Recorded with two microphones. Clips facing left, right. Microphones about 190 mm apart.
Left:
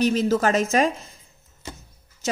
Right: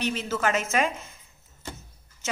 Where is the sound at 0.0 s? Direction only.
40° left (ahead or behind).